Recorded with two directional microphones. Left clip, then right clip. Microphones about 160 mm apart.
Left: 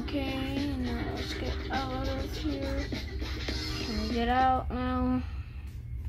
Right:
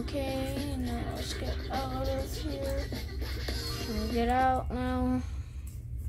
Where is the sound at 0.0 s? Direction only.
35° right (ahead or behind).